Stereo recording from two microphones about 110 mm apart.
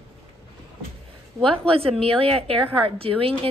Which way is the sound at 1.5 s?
60° right (ahead or behind).